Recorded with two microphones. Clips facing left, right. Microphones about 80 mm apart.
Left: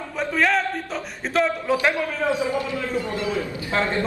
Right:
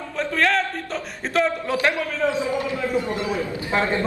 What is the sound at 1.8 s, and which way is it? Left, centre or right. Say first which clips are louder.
Speech: right 1 dB; centre.